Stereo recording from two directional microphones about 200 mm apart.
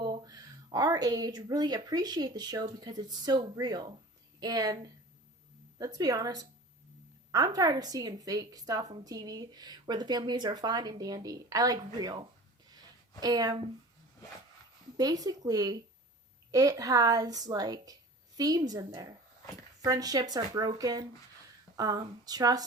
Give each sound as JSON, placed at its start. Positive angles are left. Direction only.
{"t": 0.0, "sound": "a woman's voice", "side_deg": -20}
{"t": 12.7, "sound": "a sound", "side_deg": -20}
{"t": 14.9, "sound": "a woman's voice", "side_deg": -20}